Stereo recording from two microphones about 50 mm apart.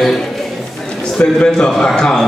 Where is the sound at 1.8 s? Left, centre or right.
Centre.